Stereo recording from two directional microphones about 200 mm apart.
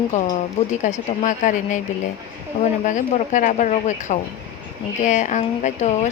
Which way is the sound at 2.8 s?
40° left (ahead or behind).